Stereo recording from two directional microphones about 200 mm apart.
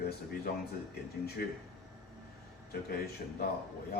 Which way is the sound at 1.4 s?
50° left (ahead or behind).